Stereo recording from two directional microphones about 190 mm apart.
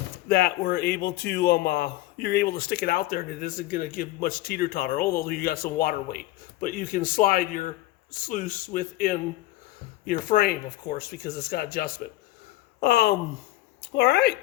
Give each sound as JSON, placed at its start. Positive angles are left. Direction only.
{"t": 0.3, "sound": "a man's voice", "side_deg": 55}